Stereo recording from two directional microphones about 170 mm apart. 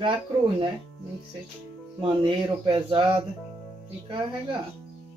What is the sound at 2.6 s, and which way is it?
Speech, 30° right (ahead or behind).